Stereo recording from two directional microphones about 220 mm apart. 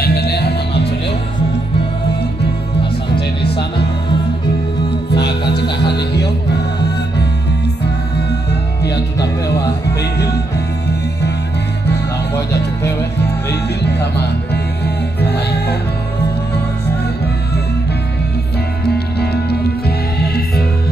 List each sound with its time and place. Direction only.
0.0 s music: 45° left (ahead or behind)
3.4 s music: 50° left (ahead or behind)
5.1 s music: 50° left (ahead or behind)
8.8 s music: 50° left (ahead or behind)
13.5 s music: 50° left (ahead or behind)
15.1 s music: 50° left (ahead or behind)
20.2 s music: 45° left (ahead or behind)